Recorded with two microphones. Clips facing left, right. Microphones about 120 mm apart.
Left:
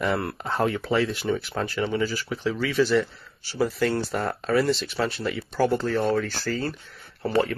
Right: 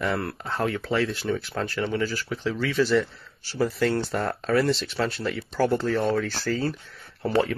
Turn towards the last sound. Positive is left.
turn(degrees=0)  # may be behind; listen again after turning